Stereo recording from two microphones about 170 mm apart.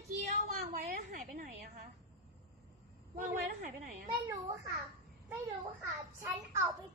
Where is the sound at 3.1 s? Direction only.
50° right (ahead or behind).